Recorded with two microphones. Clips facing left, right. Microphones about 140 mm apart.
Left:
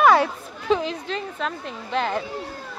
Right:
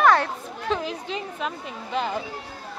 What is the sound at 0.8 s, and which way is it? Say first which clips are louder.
A woman's voice: left 2 dB; 10° right (ahead or behind).